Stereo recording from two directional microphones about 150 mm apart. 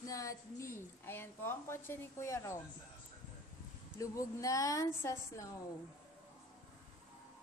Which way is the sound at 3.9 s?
20° left (ahead or behind).